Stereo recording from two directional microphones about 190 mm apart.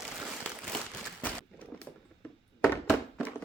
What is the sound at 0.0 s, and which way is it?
Crumpling, centre (ahead or behind).